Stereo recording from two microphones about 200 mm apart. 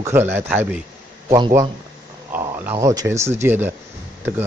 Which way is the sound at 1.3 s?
20° right (ahead or behind).